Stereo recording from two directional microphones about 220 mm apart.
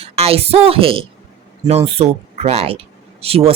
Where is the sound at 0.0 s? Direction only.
25° right (ahead or behind).